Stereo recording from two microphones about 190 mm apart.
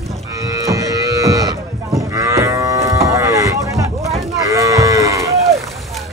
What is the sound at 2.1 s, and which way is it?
Cattle, 15° right (ahead or behind).